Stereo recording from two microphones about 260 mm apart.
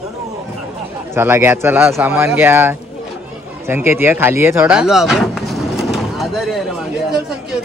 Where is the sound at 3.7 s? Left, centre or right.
Centre.